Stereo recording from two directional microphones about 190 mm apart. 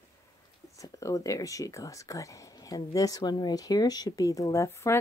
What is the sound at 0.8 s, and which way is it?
Speech, 15° left (ahead or behind).